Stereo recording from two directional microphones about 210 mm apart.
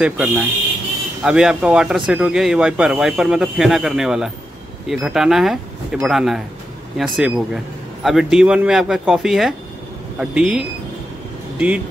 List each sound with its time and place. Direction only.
0.0 s speech: 10° right (ahead or behind)